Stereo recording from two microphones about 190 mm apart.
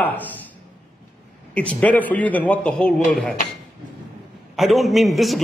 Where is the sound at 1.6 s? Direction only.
5° left (ahead or behind).